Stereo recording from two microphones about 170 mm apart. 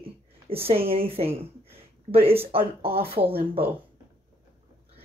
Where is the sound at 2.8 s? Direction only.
35° right (ahead or behind).